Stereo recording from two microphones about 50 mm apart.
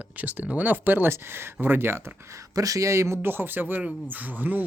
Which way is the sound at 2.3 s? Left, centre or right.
Right.